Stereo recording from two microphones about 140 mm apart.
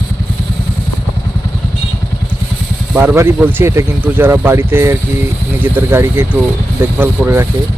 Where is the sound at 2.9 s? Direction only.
15° right (ahead or behind).